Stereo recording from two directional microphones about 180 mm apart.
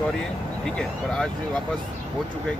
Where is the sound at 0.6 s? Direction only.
5° left (ahead or behind).